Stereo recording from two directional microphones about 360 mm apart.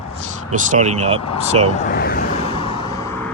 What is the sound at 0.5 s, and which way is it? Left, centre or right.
Speech, right.